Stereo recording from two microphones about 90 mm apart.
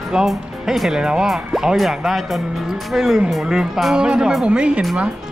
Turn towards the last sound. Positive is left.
turn(degrees=-10)  # may be behind; listen again after turning